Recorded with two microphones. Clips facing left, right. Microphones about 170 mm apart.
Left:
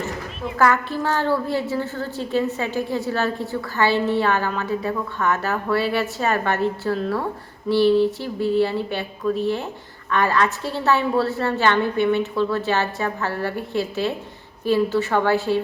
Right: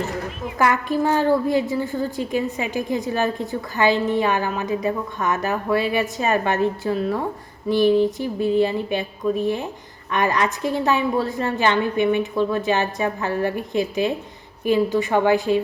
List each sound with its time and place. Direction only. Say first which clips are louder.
0.6 s a woman's voice: right 1 dB; 15° right (ahead or behind)